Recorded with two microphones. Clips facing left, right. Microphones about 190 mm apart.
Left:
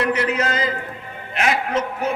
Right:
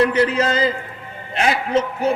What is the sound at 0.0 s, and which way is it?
A man's voice, 30° right (ahead or behind).